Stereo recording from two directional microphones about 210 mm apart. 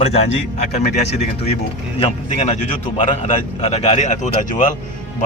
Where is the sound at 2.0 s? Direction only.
30° left (ahead or behind).